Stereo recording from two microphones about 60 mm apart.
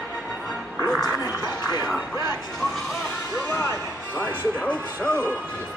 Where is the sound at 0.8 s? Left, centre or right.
Centre.